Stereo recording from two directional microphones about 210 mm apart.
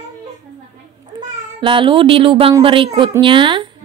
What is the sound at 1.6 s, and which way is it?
A woman's voice, 25° right (ahead or behind).